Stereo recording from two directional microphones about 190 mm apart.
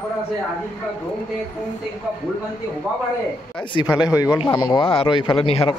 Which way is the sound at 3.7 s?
20° left (ahead or behind).